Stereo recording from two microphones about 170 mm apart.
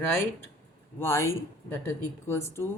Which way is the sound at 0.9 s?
15° left (ahead or behind).